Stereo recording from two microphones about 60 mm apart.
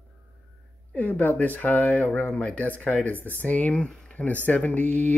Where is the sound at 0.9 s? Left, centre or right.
Left.